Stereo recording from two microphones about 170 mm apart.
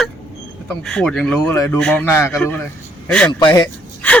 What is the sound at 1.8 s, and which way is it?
A man's voice, 5° left (ahead or behind).